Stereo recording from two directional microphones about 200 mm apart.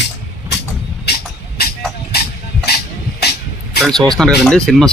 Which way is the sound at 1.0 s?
50° left (ahead or behind).